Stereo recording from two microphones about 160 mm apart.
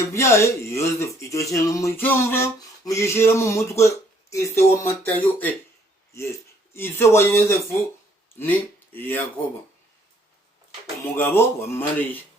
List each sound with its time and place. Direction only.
0.1 s speech: 20° left (ahead or behind)
6.7 s speech: 15° left (ahead or behind)
11.0 s speech: 15° left (ahead or behind)